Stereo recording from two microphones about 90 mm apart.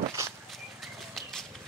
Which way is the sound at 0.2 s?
30° right (ahead or behind).